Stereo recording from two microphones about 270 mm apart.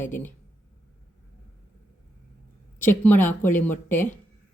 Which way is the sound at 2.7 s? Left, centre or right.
Centre.